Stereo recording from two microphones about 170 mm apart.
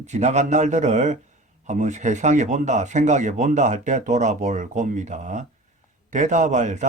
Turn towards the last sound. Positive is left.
turn(degrees=-45)  # may be behind; listen again after turning